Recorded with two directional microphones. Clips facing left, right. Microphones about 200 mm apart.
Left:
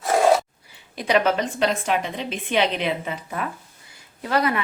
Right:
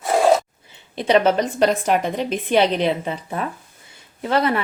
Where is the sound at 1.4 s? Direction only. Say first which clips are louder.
Right 4 dB; 40° right (ahead or behind).